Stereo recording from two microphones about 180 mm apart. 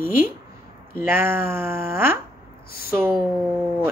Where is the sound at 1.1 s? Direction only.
15° right (ahead or behind).